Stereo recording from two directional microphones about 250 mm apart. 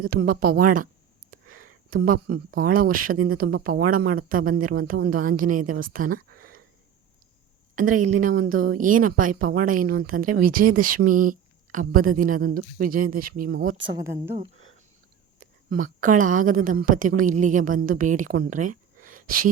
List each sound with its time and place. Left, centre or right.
0.0 s speech: right
7.8 s speech: right
13.8 s speech: centre
15.4 s a woman's voice: right